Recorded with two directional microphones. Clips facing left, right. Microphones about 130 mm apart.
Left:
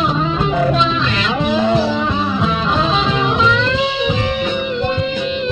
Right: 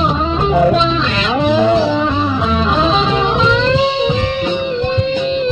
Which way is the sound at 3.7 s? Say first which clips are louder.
Right 4 dB; 30° right (ahead or behind).